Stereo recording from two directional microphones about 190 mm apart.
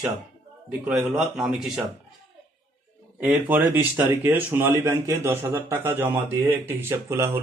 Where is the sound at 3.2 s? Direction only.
10° right (ahead or behind).